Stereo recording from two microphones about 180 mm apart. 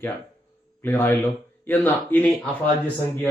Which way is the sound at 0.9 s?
10° left (ahead or behind).